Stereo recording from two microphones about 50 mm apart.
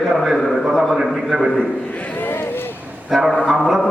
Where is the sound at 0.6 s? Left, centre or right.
Centre.